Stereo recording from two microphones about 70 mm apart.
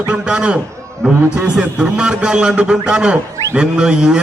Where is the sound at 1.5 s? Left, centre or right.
Centre.